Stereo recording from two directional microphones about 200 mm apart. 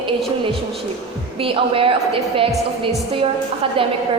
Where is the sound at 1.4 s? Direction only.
25° right (ahead or behind).